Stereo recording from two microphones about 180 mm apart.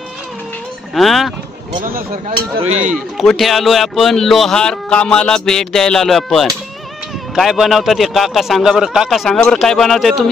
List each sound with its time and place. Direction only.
0.9 s speech: centre (ahead or behind)
1.8 s speech: 50° right (ahead or behind)
2.6 s speech: 40° right (ahead or behind)
2.9 s speech: centre (ahead or behind)